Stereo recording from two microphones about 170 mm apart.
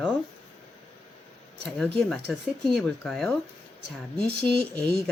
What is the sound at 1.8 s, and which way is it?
Speech, 5° left (ahead or behind).